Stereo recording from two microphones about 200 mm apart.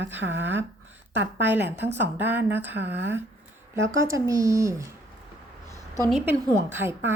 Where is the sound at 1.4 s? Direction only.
10° right (ahead or behind).